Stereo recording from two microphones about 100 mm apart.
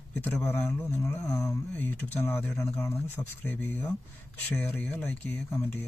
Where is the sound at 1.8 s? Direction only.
20° left (ahead or behind).